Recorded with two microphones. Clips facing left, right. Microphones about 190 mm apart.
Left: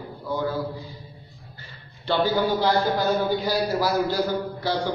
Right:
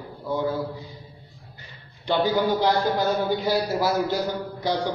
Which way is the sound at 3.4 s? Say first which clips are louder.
Even; 25° right (ahead or behind).